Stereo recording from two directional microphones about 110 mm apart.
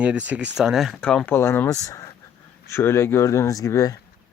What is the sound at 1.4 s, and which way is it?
Speech, 20° left (ahead or behind).